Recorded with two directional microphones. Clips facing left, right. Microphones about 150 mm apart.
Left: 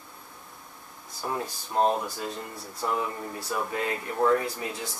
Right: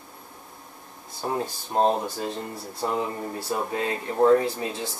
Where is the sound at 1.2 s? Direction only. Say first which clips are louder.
Right 4 dB; 30° right (ahead or behind).